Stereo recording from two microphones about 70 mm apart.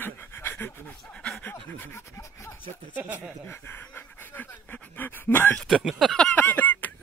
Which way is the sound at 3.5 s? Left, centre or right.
Left.